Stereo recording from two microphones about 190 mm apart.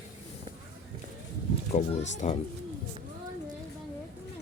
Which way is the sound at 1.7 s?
35° left (ahead or behind).